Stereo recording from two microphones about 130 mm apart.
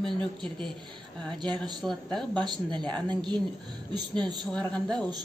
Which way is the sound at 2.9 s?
35° right (ahead or behind).